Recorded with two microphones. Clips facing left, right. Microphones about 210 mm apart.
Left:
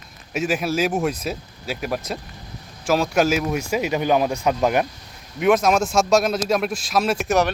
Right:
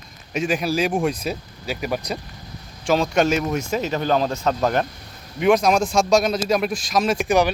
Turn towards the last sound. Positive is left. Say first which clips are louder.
# right 1 dB
turn(degrees=0)  # may be behind; listen again after turning